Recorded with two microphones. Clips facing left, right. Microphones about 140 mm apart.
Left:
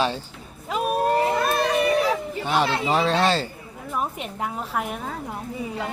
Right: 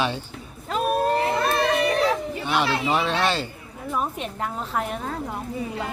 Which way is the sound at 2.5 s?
40° left (ahead or behind).